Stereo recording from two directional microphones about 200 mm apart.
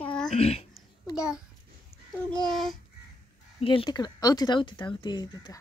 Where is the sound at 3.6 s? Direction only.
25° left (ahead or behind).